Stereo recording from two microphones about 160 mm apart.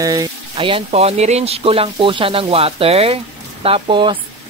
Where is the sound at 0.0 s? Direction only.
25° right (ahead or behind).